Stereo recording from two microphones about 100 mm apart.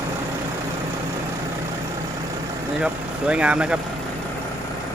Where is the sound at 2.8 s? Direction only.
10° right (ahead or behind).